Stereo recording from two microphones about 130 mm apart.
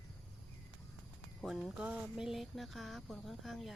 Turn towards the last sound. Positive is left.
turn(degrees=0)  # may be behind; listen again after turning